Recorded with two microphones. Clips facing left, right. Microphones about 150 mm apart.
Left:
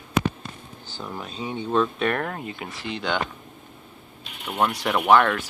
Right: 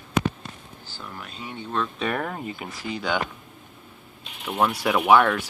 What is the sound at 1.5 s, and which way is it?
Speech, 15° left (ahead or behind).